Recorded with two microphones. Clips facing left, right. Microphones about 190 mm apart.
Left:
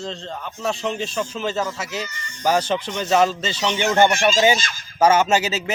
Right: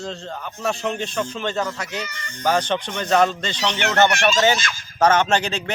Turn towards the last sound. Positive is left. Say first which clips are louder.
# left 1 dB
turn(degrees=5)  # may be behind; listen again after turning